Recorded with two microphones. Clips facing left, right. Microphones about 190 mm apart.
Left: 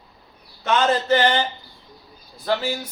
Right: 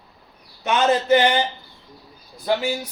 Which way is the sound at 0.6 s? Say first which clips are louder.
Right 1 dB; 15° right (ahead or behind).